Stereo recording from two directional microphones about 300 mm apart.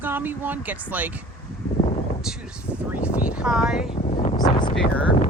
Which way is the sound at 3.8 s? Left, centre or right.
Left.